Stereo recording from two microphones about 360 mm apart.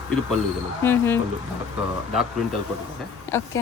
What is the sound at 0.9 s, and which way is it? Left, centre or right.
Speech, centre.